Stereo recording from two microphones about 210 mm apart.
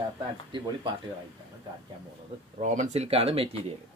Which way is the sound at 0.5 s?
20° right (ahead or behind).